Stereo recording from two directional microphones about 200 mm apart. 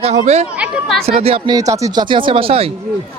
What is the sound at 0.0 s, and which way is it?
Speech, 35° right (ahead or behind).